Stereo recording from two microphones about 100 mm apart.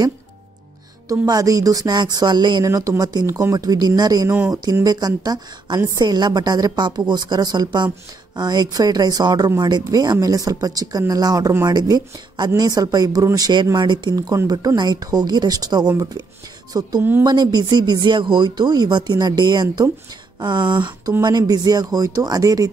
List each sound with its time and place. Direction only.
1.0 s speech: 35° right (ahead or behind)
2.6 s speech: 35° right (ahead or behind)